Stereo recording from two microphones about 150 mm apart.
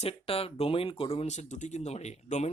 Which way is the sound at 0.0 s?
40° left (ahead or behind).